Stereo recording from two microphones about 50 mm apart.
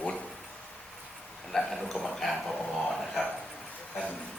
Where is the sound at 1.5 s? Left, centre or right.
Centre.